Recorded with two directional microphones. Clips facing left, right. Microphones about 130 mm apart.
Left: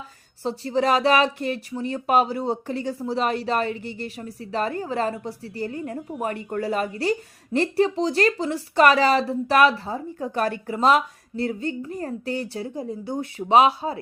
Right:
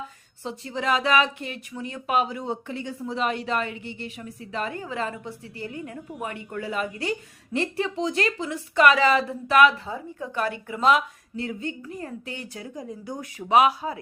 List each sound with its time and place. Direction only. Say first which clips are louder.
0.4 s speech: left 6 dB; 35° left (ahead or behind)